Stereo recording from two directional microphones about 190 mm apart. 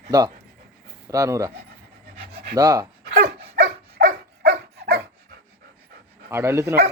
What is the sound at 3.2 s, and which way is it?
Dog, 55° right (ahead or behind).